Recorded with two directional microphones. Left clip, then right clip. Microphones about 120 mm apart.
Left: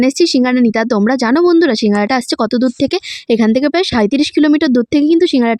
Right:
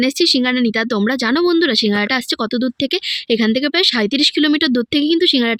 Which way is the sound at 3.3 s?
45° left (ahead or behind).